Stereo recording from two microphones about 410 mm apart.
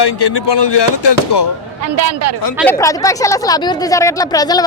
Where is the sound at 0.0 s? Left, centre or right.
Left.